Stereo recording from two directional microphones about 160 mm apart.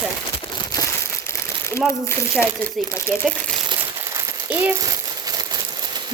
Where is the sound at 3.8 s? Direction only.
15° right (ahead or behind).